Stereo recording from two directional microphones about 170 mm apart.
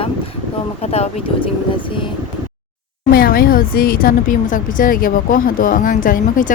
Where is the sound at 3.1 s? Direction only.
60° left (ahead or behind).